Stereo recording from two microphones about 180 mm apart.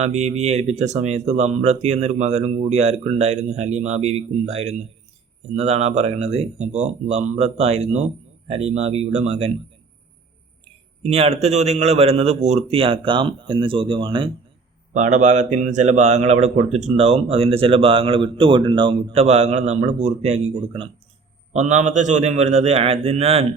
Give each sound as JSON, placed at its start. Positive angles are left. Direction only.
{"t": 0.0, "sound": "a man's voice", "side_deg": -35}
{"t": 11.0, "sound": "a man's voice", "side_deg": -35}
{"t": 14.9, "sound": "a man's voice", "side_deg": -40}